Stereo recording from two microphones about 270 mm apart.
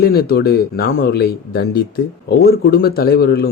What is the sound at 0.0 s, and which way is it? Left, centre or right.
Speech, left.